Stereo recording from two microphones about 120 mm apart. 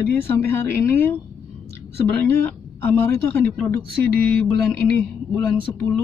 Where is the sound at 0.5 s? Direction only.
20° left (ahead or behind).